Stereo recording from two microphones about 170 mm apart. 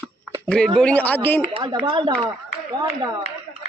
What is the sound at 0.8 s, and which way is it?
Speech, 10° left (ahead or behind).